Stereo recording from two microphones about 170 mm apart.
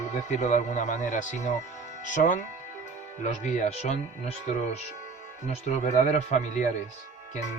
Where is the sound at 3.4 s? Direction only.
40° left (ahead or behind).